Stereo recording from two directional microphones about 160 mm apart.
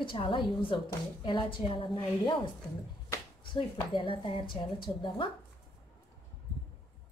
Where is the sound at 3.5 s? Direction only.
30° left (ahead or behind).